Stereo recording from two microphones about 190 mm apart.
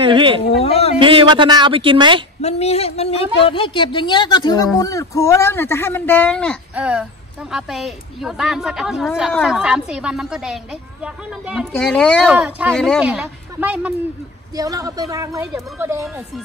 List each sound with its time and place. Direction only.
0.0 s a sound: 25° right (ahead or behind)
0.5 s a sound: 30° left (ahead or behind)
0.9 s a woman's voice: 25° right (ahead or behind)
2.4 s a sound: 35° left (ahead or behind)
3.3 s speech: 30° left (ahead or behind); by 6.6 s 5° left (ahead or behind)
6.7 s a woman's voice: 5° right (ahead or behind)
12.4 s speech: 10° right (ahead or behind)
12.7 s a woman's voice: 5° left (ahead or behind)
14.5 s speech: 20° right (ahead or behind)